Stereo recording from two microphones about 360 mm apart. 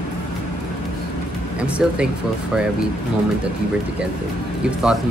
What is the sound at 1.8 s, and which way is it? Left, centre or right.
Speech, centre.